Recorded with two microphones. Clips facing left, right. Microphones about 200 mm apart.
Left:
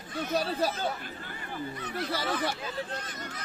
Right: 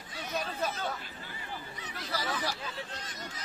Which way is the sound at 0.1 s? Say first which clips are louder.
Left 9 dB; 50° left (ahead or behind).